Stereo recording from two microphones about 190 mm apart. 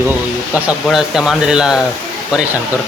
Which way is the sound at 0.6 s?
Centre (ahead or behind).